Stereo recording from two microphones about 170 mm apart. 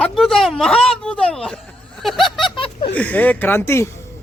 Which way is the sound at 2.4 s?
30° left (ahead or behind).